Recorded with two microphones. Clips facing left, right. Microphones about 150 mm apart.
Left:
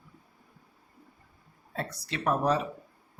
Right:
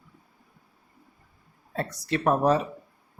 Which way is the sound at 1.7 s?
45° right (ahead or behind).